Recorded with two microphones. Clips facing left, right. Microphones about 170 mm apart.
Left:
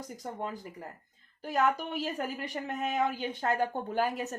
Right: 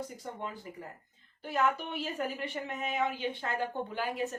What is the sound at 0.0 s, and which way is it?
Speech, 40° left (ahead or behind).